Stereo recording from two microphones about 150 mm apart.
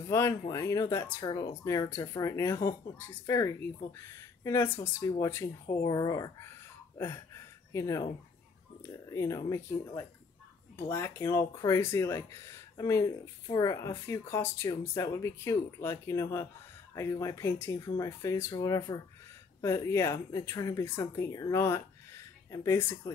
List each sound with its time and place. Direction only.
0.0 s speech: 15° left (ahead or behind)